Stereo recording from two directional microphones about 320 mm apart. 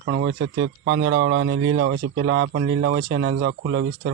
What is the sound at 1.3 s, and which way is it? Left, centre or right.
Speech, right.